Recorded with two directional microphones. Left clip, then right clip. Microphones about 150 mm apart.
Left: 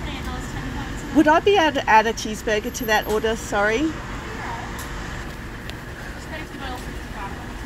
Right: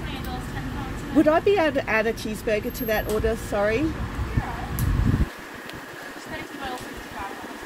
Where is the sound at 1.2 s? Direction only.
15° right (ahead or behind).